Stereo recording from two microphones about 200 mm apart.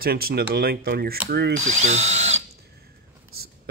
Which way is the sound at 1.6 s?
35° right (ahead or behind).